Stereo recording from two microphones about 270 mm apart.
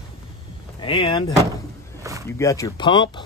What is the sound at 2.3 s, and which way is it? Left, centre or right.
Speech, centre.